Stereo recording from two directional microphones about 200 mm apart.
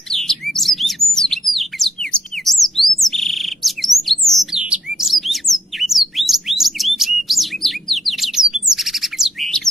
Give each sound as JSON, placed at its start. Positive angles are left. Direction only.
{"t": 0.1, "sound": "bird", "side_deg": 0}